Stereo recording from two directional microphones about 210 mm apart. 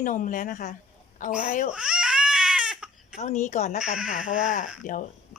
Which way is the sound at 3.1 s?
35° left (ahead or behind).